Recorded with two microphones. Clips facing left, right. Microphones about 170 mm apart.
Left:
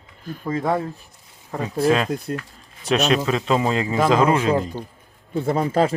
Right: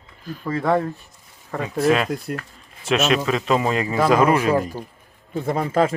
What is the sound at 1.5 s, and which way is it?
Speech, 30° left (ahead or behind).